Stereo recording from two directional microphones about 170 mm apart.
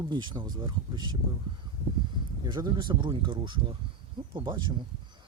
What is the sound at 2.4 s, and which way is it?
Speech, 25° right (ahead or behind).